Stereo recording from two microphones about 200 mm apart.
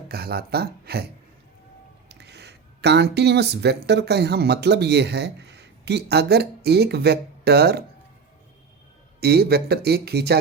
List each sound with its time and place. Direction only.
0.1 s speech: 50° right (ahead or behind)
2.0 s speech: 55° right (ahead or behind)
9.2 s speech: 50° right (ahead or behind)